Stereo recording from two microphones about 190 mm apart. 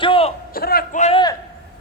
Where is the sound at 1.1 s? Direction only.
20° left (ahead or behind).